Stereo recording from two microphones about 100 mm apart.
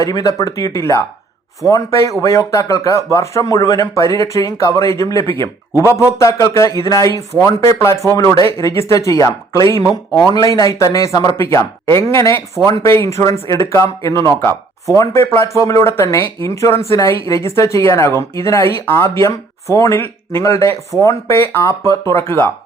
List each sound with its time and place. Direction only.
0.0 s speech: 35° left (ahead or behind)